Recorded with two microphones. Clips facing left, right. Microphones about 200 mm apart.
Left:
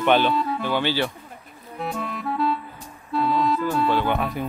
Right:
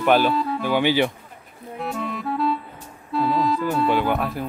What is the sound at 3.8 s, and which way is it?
Speech, 10° right (ahead or behind).